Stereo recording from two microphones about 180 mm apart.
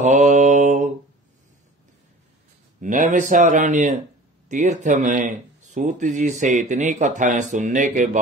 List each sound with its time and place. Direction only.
0.3 s mantra: 45° right (ahead or behind)
2.8 s speech: 45° right (ahead or behind)